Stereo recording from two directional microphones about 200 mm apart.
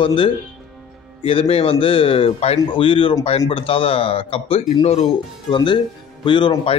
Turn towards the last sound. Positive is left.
turn(degrees=25)  # may be behind; listen again after turning